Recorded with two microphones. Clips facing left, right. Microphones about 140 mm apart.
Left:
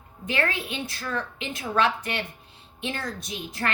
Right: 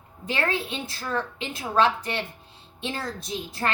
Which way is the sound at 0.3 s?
30° right (ahead or behind).